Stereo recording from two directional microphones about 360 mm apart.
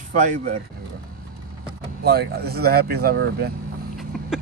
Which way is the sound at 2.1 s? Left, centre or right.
Right.